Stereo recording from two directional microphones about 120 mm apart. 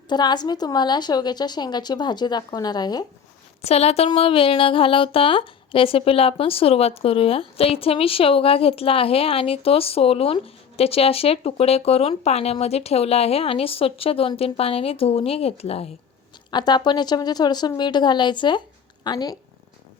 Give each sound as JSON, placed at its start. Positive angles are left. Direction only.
{"t": 0.1, "sound": "a woman's voice", "side_deg": 35}
{"t": 3.6, "sound": "speech", "side_deg": 60}
{"t": 16.5, "sound": "a woman's voice", "side_deg": 35}